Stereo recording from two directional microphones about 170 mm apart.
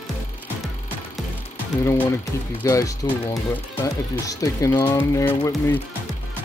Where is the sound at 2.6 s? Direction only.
20° left (ahead or behind).